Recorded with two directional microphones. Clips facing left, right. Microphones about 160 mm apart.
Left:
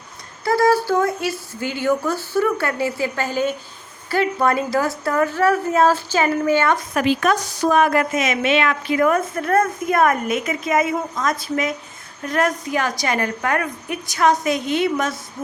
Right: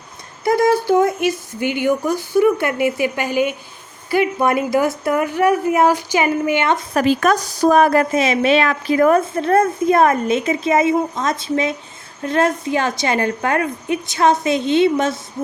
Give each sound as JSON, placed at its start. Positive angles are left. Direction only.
{"t": 0.4, "sound": "speech", "side_deg": -20}
{"t": 6.9, "sound": "a woman's voice", "side_deg": -40}